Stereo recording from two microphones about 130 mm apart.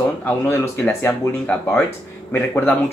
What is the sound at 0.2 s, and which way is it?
Speech, 15° left (ahead or behind).